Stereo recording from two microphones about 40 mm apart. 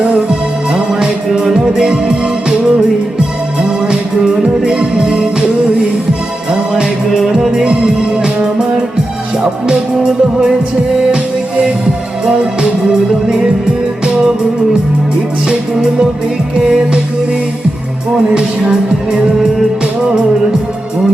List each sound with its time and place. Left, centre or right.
0.7 s music: right
4.6 s music: right
7.1 s music: centre
12.2 s music: right
15.4 s music: centre
18.7 s music: centre